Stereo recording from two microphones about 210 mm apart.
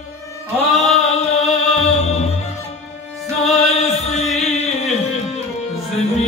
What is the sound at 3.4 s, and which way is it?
Music, 30° left (ahead or behind).